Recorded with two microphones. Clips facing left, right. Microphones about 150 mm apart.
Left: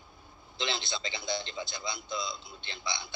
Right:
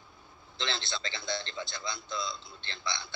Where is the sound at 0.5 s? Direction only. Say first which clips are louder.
Left 1 dB; 15° left (ahead or behind).